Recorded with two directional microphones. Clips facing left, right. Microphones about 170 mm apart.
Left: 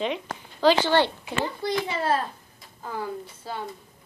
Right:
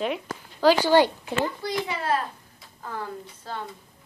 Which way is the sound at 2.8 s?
10° left (ahead or behind).